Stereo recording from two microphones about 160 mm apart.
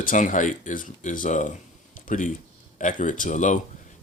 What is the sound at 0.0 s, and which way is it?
Speech, 55° left (ahead or behind).